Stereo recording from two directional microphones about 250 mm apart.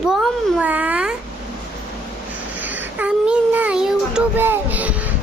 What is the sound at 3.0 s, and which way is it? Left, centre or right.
Child singing, centre.